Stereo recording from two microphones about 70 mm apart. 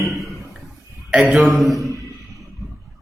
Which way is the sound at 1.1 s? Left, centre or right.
Centre.